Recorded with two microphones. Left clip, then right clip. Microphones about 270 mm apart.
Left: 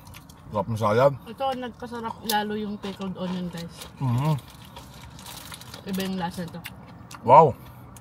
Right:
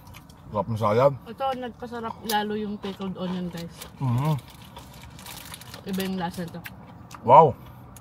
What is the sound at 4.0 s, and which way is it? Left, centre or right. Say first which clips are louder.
Speech: even; left.